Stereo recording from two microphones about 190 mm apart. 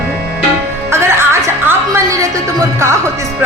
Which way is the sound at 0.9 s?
15° right (ahead or behind).